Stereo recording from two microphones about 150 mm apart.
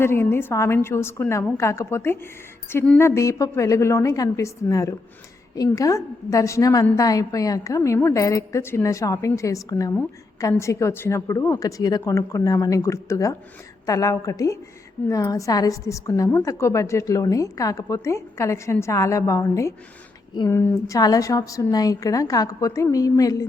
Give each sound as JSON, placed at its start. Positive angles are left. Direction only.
{"t": 0.0, "sound": "a woman's voice", "side_deg": 15}
{"t": 9.9, "sound": "a woman's voice", "side_deg": 10}